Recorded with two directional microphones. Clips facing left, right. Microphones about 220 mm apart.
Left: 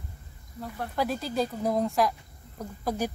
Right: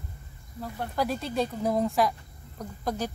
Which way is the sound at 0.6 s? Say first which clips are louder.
Even; centre (ahead or behind).